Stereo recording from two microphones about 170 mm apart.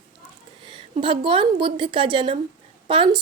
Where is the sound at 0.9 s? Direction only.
30° right (ahead or behind).